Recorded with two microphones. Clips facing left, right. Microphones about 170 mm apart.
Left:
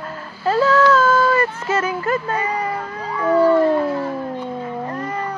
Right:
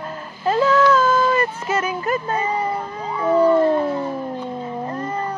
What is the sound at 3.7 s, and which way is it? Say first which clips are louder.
Howl: left 1 dB; 25° right (ahead or behind).